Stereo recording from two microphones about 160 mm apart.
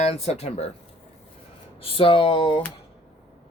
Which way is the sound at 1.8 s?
35° left (ahead or behind).